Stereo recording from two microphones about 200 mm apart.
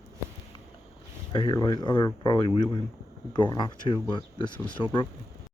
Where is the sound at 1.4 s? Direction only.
20° left (ahead or behind).